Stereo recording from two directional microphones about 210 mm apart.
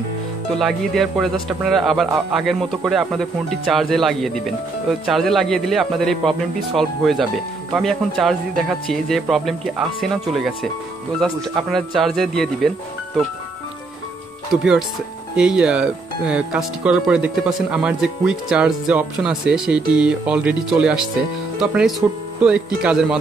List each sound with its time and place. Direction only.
0.6 s speech: centre (ahead or behind)
14.5 s speech: centre (ahead or behind)